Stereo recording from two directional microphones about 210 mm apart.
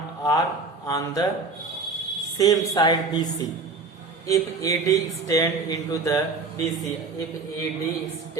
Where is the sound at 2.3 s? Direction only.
15° left (ahead or behind).